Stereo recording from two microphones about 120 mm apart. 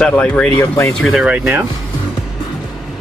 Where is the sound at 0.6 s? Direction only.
25° left (ahead or behind).